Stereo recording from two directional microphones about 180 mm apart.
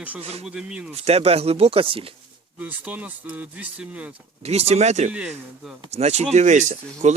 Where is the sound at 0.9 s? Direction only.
35° right (ahead or behind).